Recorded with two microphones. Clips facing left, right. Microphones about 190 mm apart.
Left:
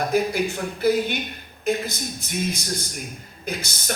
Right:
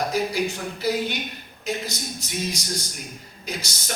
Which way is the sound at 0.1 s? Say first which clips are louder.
Left 3 dB; 55° left (ahead or behind).